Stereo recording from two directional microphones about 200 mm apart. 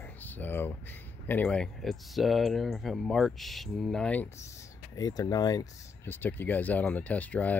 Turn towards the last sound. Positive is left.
turn(degrees=10)  # may be behind; listen again after turning